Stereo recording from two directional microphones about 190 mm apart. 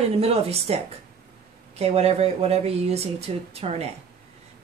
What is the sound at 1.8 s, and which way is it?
A woman's voice, 35° right (ahead or behind).